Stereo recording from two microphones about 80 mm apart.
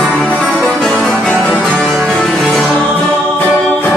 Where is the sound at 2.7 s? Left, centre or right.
Centre.